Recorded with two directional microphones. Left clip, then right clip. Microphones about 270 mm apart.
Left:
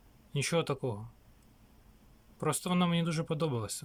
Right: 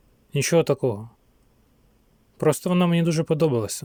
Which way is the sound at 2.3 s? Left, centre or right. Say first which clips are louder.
Right 11 dB; right.